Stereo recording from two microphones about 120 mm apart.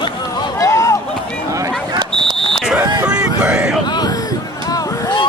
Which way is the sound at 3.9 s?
35° left (ahead or behind).